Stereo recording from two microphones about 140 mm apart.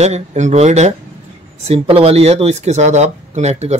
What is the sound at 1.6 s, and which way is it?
Speech, 40° right (ahead or behind).